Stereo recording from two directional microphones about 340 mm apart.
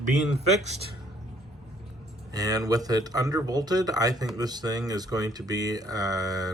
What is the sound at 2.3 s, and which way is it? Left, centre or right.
Speech, centre.